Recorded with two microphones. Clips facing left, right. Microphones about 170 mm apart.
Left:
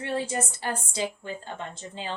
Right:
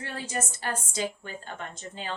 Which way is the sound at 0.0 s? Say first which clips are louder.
Left 5 dB; 25° left (ahead or behind).